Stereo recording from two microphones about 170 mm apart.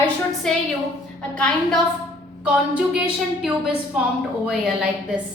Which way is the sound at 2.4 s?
5° right (ahead or behind).